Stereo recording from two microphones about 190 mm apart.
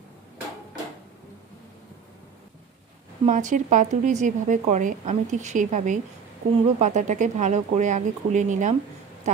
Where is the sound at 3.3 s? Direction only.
40° right (ahead or behind).